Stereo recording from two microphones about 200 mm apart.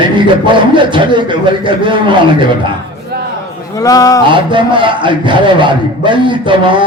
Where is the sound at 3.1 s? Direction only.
55° right (ahead or behind).